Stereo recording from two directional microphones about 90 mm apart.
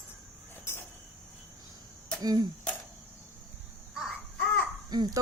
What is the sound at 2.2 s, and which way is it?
Speech, 50° right (ahead or behind).